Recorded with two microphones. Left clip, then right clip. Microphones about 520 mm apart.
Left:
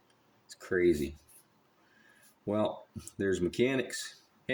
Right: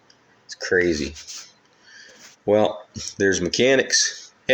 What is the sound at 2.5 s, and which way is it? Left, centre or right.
Speech, left.